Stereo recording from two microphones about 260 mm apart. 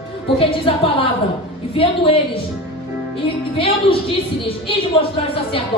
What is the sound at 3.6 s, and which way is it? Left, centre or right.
Speech, left.